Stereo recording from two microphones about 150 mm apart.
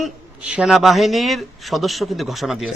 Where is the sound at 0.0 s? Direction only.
5° right (ahead or behind).